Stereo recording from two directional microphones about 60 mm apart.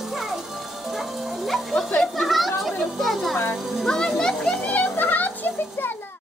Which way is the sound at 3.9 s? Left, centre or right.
Centre.